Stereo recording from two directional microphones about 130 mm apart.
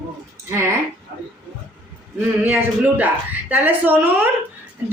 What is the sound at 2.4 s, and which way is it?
A woman's voice, 15° right (ahead or behind).